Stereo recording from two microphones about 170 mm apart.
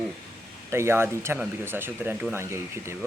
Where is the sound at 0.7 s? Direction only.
15° right (ahead or behind).